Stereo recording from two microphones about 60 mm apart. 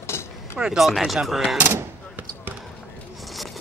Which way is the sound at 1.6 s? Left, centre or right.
Right.